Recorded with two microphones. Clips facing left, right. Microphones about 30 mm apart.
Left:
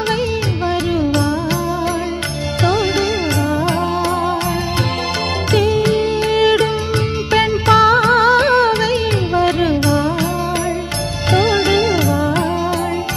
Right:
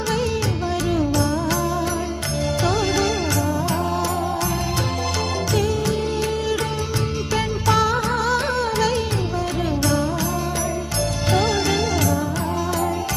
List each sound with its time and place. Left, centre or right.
1.1 s music: left
2.6 s music: left
5.5 s music: left
6.3 s music: left
7.2 s music: left
8.8 s music: left
9.4 s music: left
11.3 s music: left